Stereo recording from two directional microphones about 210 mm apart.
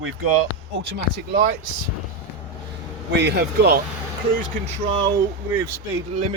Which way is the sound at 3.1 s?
55° right (ahead or behind).